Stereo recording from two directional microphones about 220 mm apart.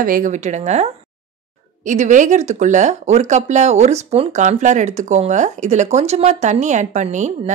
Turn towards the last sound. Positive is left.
turn(degrees=-35)  # may be behind; listen again after turning